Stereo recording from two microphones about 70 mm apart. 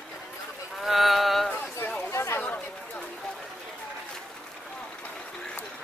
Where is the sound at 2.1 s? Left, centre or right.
Left.